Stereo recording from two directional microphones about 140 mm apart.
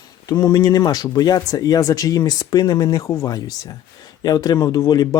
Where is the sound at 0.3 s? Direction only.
30° left (ahead or behind).